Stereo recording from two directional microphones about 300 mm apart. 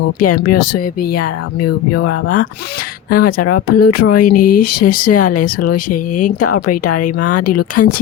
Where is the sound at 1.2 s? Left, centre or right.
Left.